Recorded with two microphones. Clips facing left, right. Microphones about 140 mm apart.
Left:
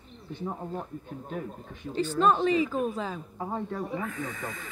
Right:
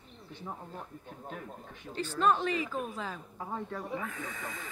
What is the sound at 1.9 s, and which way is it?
Speech, 25° left (ahead or behind).